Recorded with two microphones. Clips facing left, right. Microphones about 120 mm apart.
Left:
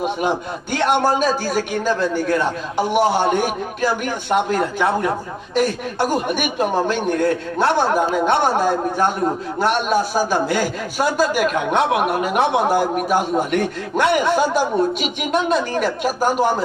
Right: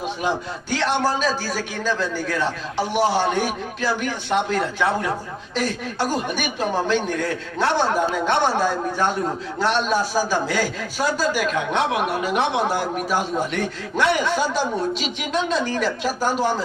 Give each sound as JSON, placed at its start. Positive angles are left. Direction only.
{"t": 0.0, "sound": "a man's voice", "side_deg": 55}